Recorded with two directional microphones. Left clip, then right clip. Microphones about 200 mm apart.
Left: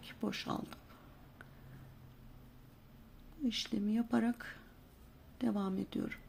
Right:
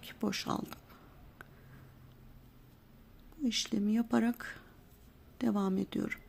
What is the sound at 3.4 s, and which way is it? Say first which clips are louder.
Speech: right 4 dB; 25° right (ahead or behind).